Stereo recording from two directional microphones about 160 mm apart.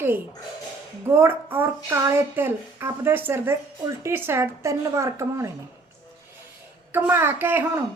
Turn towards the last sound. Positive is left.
turn(degrees=-15)  # may be behind; listen again after turning